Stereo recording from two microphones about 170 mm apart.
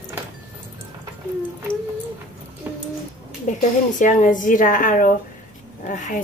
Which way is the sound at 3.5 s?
45° left (ahead or behind).